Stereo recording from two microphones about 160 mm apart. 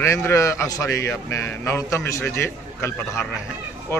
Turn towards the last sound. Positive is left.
turn(degrees=15)  # may be behind; listen again after turning